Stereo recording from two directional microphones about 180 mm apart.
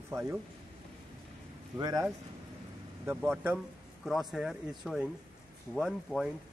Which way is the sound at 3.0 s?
10° right (ahead or behind).